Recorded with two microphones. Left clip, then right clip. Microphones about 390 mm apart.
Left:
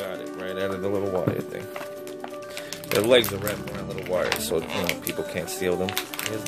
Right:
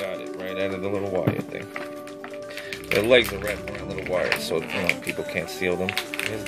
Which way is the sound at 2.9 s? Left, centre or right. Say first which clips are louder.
Right 1 dB; centre.